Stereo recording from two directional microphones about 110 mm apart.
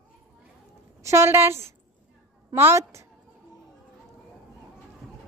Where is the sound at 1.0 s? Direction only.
25° right (ahead or behind).